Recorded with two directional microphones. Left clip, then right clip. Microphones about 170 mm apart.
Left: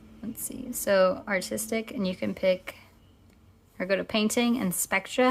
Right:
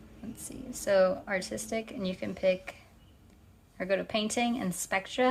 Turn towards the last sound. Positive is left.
turn(degrees=30)  # may be behind; listen again after turning